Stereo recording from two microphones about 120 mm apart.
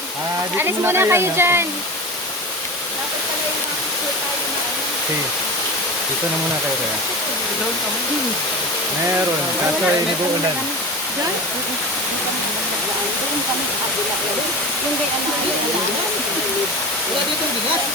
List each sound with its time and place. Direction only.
0.5 s speech: 20° right (ahead or behind)